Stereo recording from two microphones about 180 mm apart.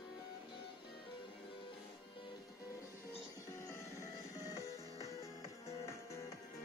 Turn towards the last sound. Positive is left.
turn(degrees=15)  # may be behind; listen again after turning